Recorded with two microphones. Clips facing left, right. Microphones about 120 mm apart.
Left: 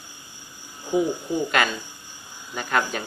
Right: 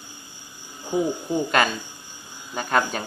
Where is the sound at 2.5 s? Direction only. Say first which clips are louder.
Right 2 dB; 35° right (ahead or behind).